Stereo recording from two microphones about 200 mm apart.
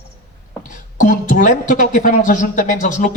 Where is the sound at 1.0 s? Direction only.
40° left (ahead or behind).